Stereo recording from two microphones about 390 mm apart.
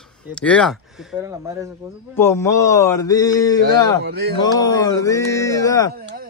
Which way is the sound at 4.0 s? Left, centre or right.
Right.